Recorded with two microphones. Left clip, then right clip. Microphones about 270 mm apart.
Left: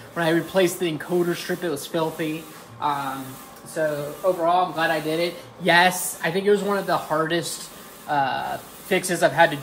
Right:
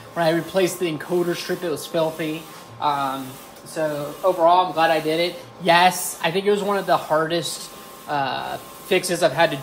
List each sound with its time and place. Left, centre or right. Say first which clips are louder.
0.1 s speech: right 1 dB; centre